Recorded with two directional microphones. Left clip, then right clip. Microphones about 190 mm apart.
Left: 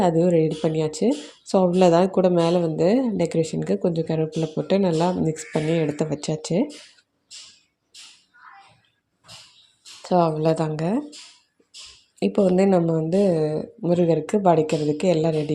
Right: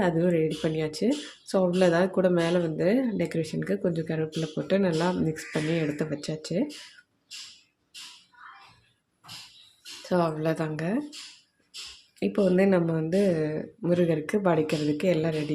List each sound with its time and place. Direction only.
0.0 s speech: 20° left (ahead or behind)
10.1 s speech: 15° left (ahead or behind)
12.2 s a woman's voice: 15° left (ahead or behind)